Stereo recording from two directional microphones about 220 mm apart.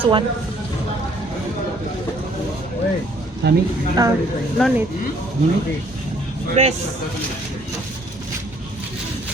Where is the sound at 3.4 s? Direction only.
50° right (ahead or behind).